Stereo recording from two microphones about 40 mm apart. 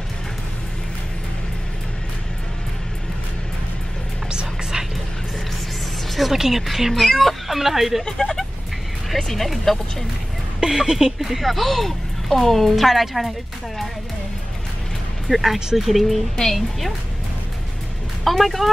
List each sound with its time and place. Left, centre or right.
4.3 s whispering: right
6.1 s speech: centre
8.0 s speech: centre
9.1 s speech: centre
10.6 s speech: centre
11.1 s speech: centre
15.2 s speech: centre
18.2 s speech: centre